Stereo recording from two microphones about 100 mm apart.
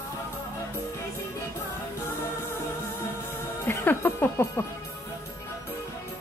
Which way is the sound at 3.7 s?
20° left (ahead or behind).